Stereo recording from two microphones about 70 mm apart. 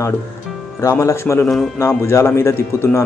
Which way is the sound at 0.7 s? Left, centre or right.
Left.